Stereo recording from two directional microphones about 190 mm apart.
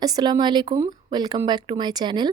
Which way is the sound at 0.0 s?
20° right (ahead or behind).